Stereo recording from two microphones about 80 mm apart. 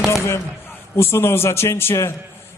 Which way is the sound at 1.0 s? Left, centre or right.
Left.